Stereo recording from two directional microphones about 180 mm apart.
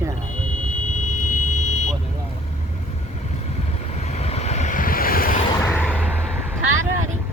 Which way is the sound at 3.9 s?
40° left (ahead or behind).